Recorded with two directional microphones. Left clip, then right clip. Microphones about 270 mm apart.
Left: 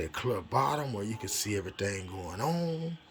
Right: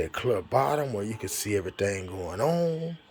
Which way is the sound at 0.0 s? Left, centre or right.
Centre.